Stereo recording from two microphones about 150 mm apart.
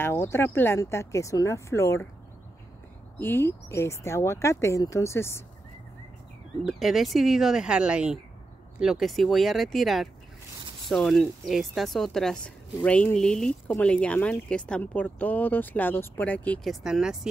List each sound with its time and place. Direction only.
0.0 s speech: 15° left (ahead or behind)
3.2 s speech: 15° left (ahead or behind)
6.6 s speech: centre (ahead or behind)
16.8 s speech: 5° right (ahead or behind)